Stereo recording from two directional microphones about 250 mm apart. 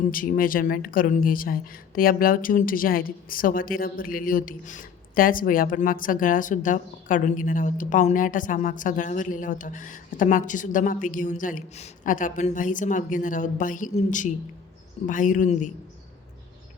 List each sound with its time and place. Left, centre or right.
0.1 s speech: left